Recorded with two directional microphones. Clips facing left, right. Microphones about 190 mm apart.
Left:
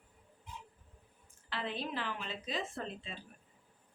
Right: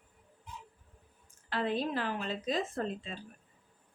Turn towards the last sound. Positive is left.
turn(degrees=-40)  # may be behind; listen again after turning